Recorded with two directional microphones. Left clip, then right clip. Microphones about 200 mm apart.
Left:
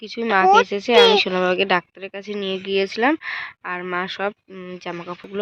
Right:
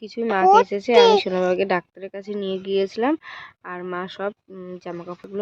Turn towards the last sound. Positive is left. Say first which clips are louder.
# left 2 dB
turn(degrees=0)  # may be behind; listen again after turning